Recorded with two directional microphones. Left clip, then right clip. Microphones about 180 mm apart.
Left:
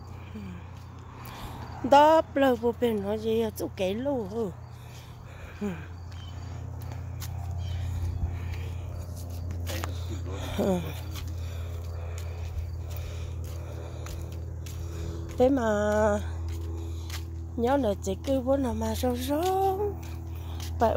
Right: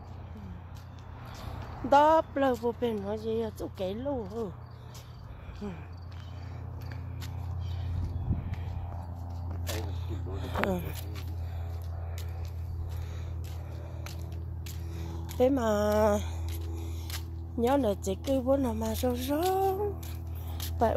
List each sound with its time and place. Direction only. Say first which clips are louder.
1.9 s speech: left 3 dB; 25° left (ahead or behind)
5.6 s speech: left 6 dB; 40° left (ahead or behind)
10.0 s music: left 2 dB; 35° left (ahead or behind)
10.7 s speech: left 4 dB; 25° left (ahead or behind)
15.3 s speech: left 2 dB; 15° left (ahead or behind); by 16.3 s 5° right (ahead or behind)
16.7 s a sound: left 1 dB; 5° right (ahead or behind)
18.2 s speech: left 1 dB; centre (ahead or behind)
19.5 s music: left 3 dB; 5° left (ahead or behind)